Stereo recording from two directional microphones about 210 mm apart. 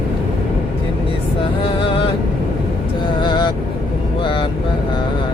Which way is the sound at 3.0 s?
20° left (ahead or behind).